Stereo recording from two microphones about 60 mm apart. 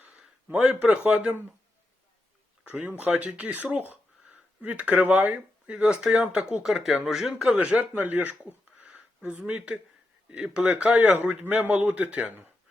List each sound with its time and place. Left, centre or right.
0.5 s speech: centre
0.8 s a man's voice: right
2.6 s a man's voice: right
7.6 s a man's voice: right